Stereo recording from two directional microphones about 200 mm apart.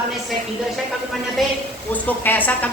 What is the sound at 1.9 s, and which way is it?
Speech, 10° left (ahead or behind).